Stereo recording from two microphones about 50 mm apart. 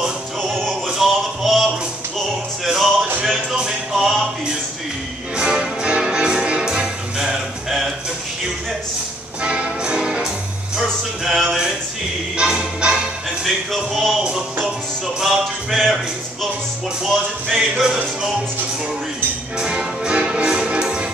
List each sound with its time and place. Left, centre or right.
0.8 s music: centre
5.4 s music: centre
7.2 s music: centre
9.4 s music: right; by 11.4 s centre
11.4 s a sound: centre
12.4 s music: centre
13.7 s music: centre
14.2 s music: centre
15.7 s music: centre
17.0 s music: centre
19.6 s music: centre